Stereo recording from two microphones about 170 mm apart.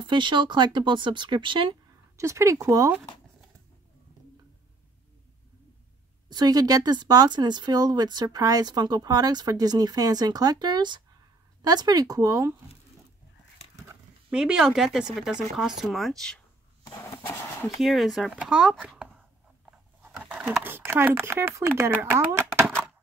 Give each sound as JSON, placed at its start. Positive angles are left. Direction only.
{"t": 0.0, "sound": "speech", "side_deg": -25}
{"t": 2.1, "sound": "speech", "side_deg": -15}
{"t": 6.2, "sound": "speech", "side_deg": -25}
{"t": 14.3, "sound": "speech", "side_deg": -5}
{"t": 17.7, "sound": "speech", "side_deg": 0}